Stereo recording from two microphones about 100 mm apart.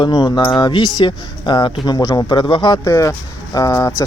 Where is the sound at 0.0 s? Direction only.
45° left (ahead or behind).